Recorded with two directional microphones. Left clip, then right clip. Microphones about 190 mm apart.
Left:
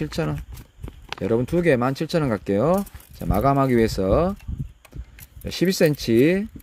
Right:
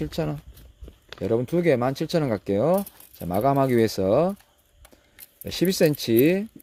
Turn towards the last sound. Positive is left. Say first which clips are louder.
# left 1 dB
turn(degrees=5)  # may be behind; listen again after turning